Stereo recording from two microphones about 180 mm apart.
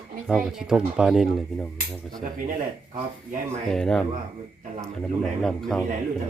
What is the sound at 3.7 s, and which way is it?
Speech, 5° left (ahead or behind).